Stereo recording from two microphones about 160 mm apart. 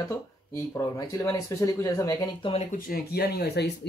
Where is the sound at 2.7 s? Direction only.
60° left (ahead or behind); by 3.9 s 90° left.